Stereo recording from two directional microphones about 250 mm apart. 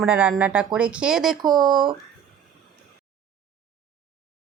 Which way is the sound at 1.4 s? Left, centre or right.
Centre.